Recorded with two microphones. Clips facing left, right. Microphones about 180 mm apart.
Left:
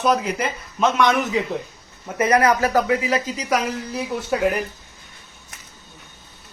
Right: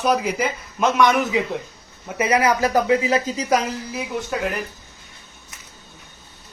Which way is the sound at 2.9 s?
30° right (ahead or behind).